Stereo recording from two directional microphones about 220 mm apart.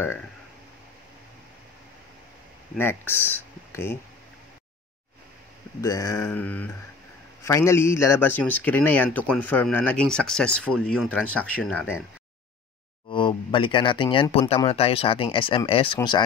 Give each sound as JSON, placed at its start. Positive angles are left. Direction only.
{"t": 0.0, "sound": "speech", "side_deg": 10}
{"t": 2.7, "sound": "speech", "side_deg": 10}
{"t": 5.8, "sound": "speech", "side_deg": 15}
{"t": 13.1, "sound": "speech", "side_deg": 20}